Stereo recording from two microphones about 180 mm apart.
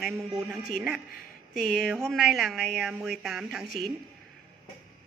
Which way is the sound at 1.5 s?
50° left (ahead or behind).